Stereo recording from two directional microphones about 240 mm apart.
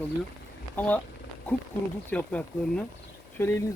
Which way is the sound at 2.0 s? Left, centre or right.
Centre.